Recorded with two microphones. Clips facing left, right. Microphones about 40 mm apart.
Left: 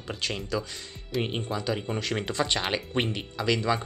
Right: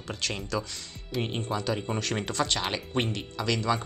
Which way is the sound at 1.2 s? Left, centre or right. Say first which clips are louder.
Even; centre.